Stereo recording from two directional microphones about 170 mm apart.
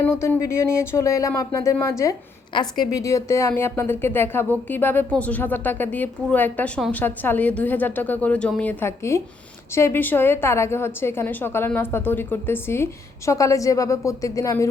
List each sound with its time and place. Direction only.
0.0 s a woman's voice: 15° left (ahead or behind)